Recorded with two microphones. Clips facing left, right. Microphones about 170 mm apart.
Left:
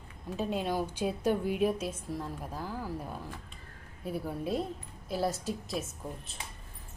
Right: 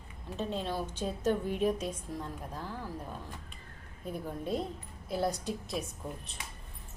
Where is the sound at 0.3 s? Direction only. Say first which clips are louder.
Left 3 dB; 10° left (ahead or behind).